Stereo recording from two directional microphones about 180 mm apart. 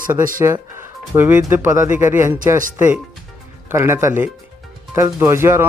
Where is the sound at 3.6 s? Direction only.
15° right (ahead or behind).